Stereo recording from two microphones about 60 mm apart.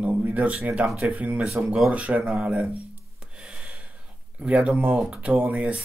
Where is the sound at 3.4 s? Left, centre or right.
Centre.